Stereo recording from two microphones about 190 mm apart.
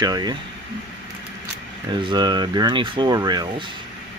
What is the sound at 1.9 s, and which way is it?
Speech, 25° right (ahead or behind).